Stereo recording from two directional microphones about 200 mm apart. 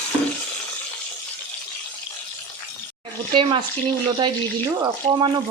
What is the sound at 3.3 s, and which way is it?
Speech, 25° right (ahead or behind).